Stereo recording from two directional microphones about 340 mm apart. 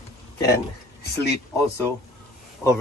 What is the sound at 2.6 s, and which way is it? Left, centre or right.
Speech, centre.